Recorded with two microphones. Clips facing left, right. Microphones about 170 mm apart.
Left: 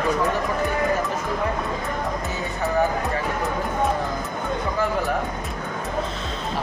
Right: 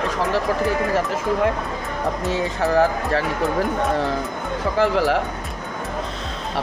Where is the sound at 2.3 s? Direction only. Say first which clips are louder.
Right 6 dB; 90° right.